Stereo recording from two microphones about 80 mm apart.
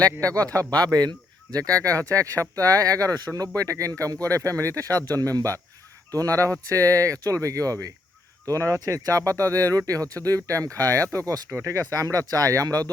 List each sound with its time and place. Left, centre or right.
0.0 s speech: right